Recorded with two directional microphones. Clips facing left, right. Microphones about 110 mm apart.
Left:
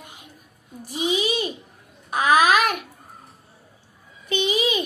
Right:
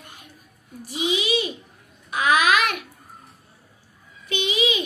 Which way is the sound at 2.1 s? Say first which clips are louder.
Left 2 dB; 40° left (ahead or behind).